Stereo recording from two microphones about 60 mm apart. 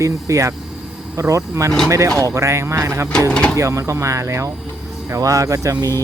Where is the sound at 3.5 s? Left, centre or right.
Right.